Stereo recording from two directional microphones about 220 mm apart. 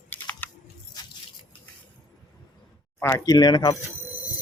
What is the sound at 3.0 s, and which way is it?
Speech, 15° left (ahead or behind).